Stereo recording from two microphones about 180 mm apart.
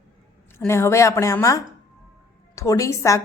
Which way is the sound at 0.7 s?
15° left (ahead or behind).